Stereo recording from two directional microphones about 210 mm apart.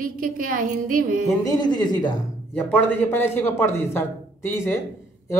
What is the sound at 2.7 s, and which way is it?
Speech, 10° left (ahead or behind).